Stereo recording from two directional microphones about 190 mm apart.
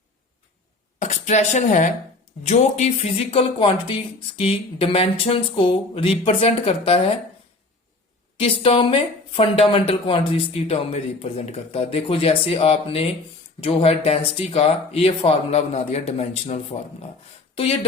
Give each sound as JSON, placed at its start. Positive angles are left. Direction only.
{"t": 0.9, "sound": "a woman's voice", "side_deg": 40}
{"t": 8.4, "sound": "speech", "side_deg": 30}